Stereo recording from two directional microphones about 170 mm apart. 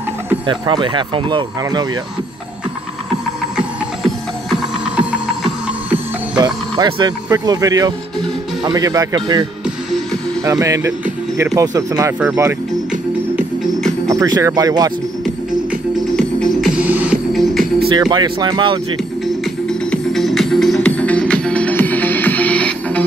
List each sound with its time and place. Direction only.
0.5 s speech: 30° right (ahead or behind)
3.5 s music: centre (ahead or behind)
6.3 s speech: 25° right (ahead or behind)
14.0 s speech: 20° right (ahead or behind)
16.2 s music: centre (ahead or behind)
17.9 s speech: 25° right (ahead or behind)
19.9 s music: centre (ahead or behind)